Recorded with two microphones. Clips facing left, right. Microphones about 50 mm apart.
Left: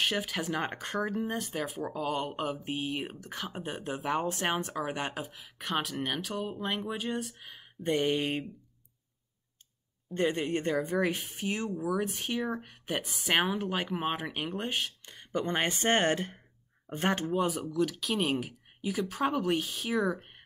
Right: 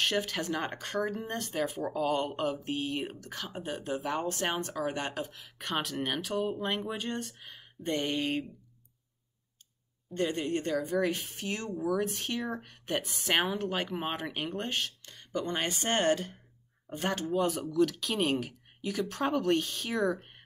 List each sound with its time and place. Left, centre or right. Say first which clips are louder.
0.0 s speech: right 1 dB; centre
7.8 s speech: left 3 dB; centre
10.1 s speech: left 1 dB; left
17.3 s speech: even; centre